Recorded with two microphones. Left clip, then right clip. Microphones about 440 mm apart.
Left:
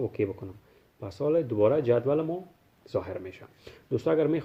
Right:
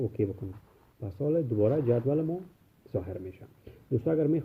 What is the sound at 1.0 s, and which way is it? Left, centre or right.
Speech, centre.